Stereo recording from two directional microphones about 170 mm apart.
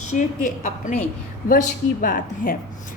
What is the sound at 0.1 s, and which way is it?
A woman's voice, 45° left (ahead or behind).